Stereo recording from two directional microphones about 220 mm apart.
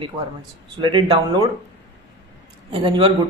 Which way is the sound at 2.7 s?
25° right (ahead or behind).